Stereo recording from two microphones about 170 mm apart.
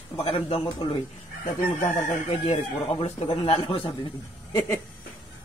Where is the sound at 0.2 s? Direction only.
35° left (ahead or behind).